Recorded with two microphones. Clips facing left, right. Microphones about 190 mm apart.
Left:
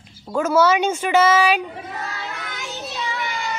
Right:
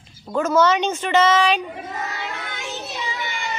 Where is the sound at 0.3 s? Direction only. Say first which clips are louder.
Left 1 dB; 5° left (ahead or behind).